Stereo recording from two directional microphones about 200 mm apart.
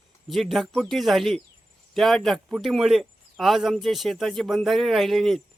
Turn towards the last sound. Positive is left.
turn(degrees=0)  # may be behind; listen again after turning